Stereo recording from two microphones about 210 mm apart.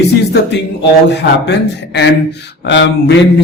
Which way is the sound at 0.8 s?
55° left (ahead or behind).